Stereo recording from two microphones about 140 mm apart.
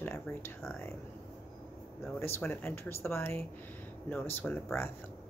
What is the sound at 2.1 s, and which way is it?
Speech, 15° left (ahead or behind).